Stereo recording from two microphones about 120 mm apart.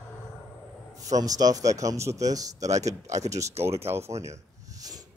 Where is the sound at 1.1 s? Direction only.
30° right (ahead or behind).